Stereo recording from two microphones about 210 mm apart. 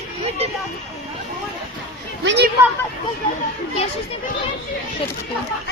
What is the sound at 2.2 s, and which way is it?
Speech, 60° right (ahead or behind).